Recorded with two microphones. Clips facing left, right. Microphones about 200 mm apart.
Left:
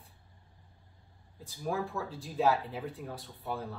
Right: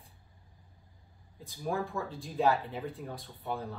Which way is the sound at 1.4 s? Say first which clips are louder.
Even; centre (ahead or behind).